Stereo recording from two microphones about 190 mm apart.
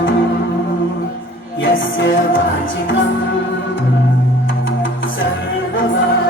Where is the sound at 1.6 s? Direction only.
85° left.